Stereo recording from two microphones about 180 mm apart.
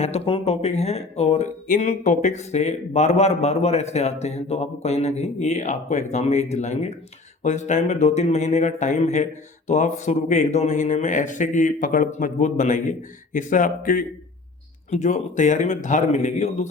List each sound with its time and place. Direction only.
0.0 s speech: 35° left (ahead or behind)